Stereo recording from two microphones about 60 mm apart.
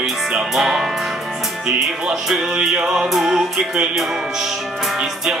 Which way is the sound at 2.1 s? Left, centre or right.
Centre.